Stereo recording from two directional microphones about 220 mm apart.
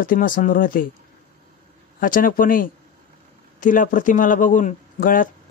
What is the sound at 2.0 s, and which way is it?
Speech, 40° left (ahead or behind).